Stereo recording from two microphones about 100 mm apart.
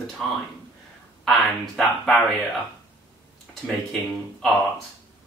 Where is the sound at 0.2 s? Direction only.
5° left (ahead or behind).